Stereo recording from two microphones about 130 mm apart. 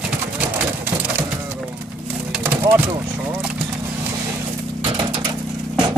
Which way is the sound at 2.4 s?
20° right (ahead or behind).